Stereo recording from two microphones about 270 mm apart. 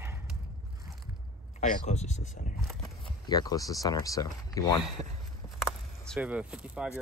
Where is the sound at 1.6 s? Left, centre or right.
Left.